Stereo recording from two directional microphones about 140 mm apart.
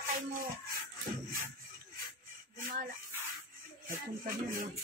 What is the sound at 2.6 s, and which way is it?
Speech, 80° right.